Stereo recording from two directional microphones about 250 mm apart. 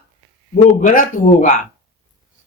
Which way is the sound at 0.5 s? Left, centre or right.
Left.